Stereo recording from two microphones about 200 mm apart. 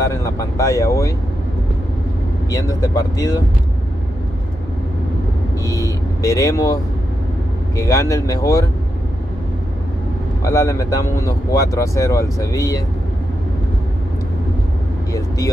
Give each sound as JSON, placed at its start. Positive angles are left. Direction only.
{"t": 0.0, "sound": "vehicle", "side_deg": 15}
{"t": 2.5, "sound": "speech", "side_deg": 15}
{"t": 5.7, "sound": "speech", "side_deg": 15}
{"t": 10.4, "sound": "speech", "side_deg": 15}
{"t": 15.1, "sound": "speech", "side_deg": 15}